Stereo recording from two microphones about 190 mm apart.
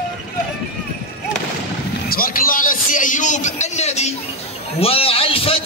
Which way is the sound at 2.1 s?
50° left (ahead or behind).